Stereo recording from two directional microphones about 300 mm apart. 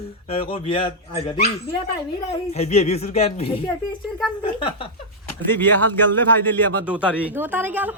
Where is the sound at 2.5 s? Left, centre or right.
Left.